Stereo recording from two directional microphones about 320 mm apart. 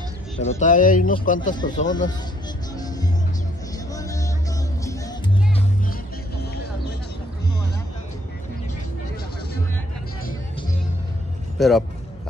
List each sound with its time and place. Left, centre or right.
0.4 s a man's voice: left
3.9 s music: centre
11.5 s speech: centre